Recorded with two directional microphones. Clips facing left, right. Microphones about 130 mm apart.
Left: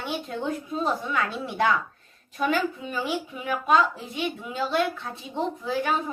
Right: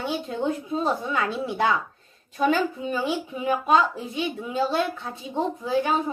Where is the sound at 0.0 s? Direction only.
25° right (ahead or behind).